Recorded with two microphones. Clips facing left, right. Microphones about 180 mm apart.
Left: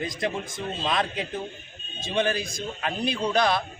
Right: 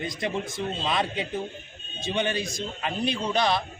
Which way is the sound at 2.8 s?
Centre (ahead or behind).